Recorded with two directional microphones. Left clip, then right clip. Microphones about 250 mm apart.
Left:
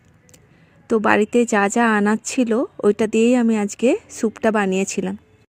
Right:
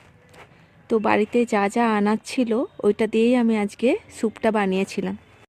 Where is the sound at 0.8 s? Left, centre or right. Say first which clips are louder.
Left 3 dB; left.